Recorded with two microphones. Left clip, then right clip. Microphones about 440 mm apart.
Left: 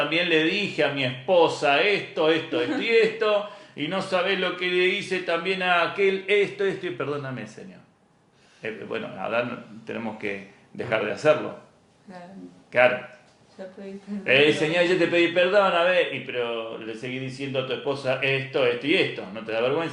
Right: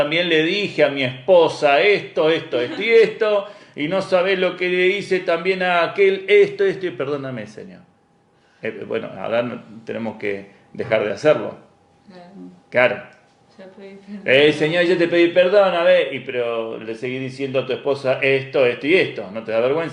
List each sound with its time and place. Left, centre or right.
0.1 s a man's voice: right
8.6 s a man's voice: right
13.6 s speech: left
14.3 s a man's voice: right